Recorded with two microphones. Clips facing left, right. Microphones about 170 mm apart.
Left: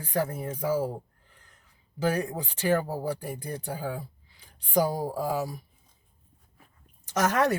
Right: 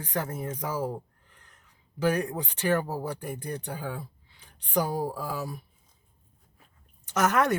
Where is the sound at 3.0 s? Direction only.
35° left (ahead or behind).